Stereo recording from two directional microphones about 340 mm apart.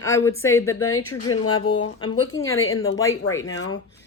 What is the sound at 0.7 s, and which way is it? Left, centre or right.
A woman's voice, left.